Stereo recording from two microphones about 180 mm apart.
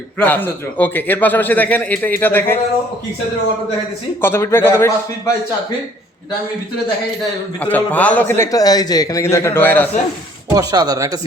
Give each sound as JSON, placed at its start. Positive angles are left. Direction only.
{"t": 0.2, "sound": "a man's voice", "side_deg": 10}
{"t": 4.2, "sound": "a man's voice", "side_deg": 15}
{"t": 7.6, "sound": "a man's voice", "side_deg": 10}
{"t": 10.5, "sound": "speech", "side_deg": -20}